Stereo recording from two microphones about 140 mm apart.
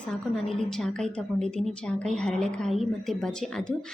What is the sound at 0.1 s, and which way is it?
A woman's voice, 5° left (ahead or behind).